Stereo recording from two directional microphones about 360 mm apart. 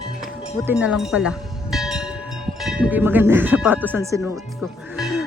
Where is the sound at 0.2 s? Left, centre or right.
Centre.